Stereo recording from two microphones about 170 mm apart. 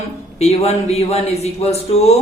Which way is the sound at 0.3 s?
40° left (ahead or behind).